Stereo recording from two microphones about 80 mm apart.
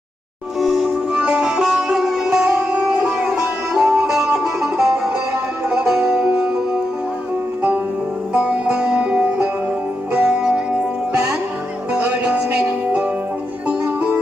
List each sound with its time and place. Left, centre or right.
0.6 s music: centre
8.3 s music: centre
11.9 s music: centre